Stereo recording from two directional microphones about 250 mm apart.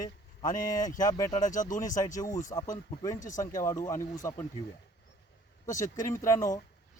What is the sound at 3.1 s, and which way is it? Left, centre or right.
Speech, left.